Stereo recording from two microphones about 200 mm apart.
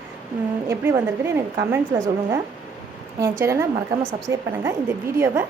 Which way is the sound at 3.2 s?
15° right (ahead or behind).